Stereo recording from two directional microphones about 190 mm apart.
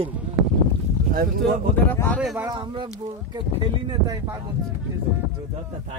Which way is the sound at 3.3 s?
25° right (ahead or behind).